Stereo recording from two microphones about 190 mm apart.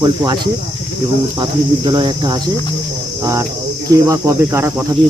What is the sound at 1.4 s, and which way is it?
Speech, 25° right (ahead or behind).